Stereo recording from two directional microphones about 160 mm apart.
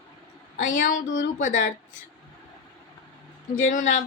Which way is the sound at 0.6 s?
55° left (ahead or behind).